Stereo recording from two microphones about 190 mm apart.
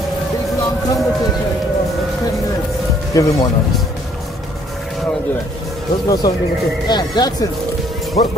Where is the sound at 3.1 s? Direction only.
20° left (ahead or behind).